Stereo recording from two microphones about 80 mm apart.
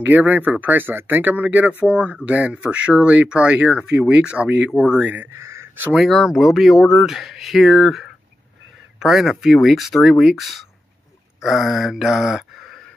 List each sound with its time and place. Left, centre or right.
0.0 s speech: centre
5.4 s a sound: right
5.9 s speech: centre